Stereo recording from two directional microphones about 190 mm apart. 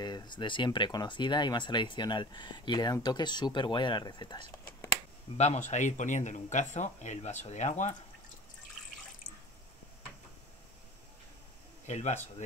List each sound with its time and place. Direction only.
0.0 s speech: 20° left (ahead or behind)
5.4 s speech: 35° left (ahead or behind)
11.8 s speech: 40° left (ahead or behind)